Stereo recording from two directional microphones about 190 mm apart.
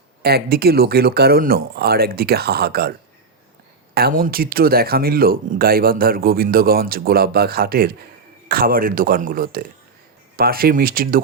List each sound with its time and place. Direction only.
0.2 s speech: 55° right (ahead or behind)
3.9 s speech: 50° right (ahead or behind)